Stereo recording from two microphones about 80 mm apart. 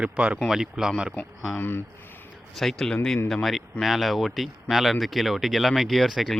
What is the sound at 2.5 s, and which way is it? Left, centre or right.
Speech, centre.